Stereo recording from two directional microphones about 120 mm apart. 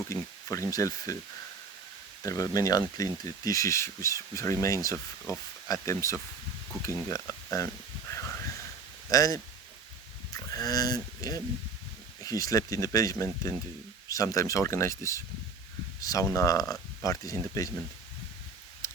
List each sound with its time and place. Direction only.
0.1 s speech: 25° left (ahead or behind)
2.2 s speech: 30° left (ahead or behind)
6.8 s a sound: 30° left (ahead or behind)
9.0 s speech: 30° left (ahead or behind)